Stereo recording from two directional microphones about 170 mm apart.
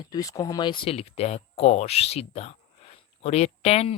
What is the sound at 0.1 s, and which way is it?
Speech, 20° left (ahead or behind).